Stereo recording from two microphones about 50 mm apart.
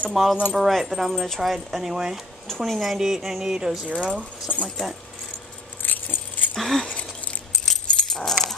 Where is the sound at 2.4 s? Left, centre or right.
Centre.